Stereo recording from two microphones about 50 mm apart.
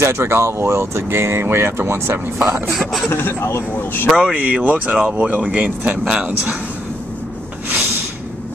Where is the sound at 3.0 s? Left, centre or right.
Left.